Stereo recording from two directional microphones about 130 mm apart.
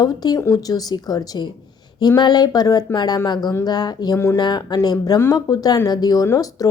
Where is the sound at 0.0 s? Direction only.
30° left (ahead or behind).